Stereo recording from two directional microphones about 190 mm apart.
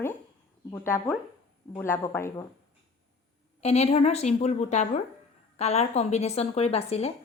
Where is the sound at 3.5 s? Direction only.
35° left (ahead or behind).